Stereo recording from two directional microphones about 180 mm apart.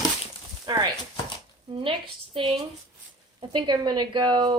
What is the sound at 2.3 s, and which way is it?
A woman's voice, 30° right (ahead or behind).